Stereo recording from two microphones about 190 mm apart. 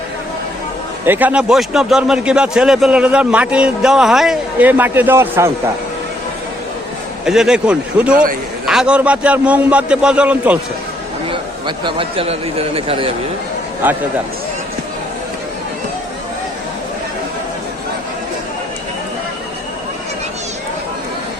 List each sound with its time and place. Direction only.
1.0 s a man's voice: 10° right (ahead or behind)
7.3 s a man's voice: 5° right (ahead or behind)
8.1 s a man's voice: 45° right (ahead or behind)
8.6 s a man's voice: 5° right (ahead or behind)
11.3 s speech: 25° right (ahead or behind)
13.8 s a man's voice: 10° right (ahead or behind)